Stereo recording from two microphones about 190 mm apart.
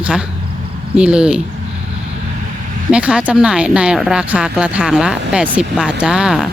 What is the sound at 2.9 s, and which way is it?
Speech, 5° right (ahead or behind).